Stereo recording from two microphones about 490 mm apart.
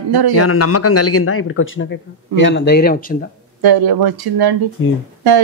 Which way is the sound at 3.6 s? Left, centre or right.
Right.